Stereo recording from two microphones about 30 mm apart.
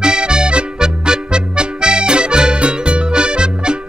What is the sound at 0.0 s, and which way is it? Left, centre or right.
Music, right.